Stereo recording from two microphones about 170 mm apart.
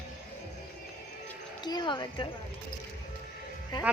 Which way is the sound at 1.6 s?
25° left (ahead or behind).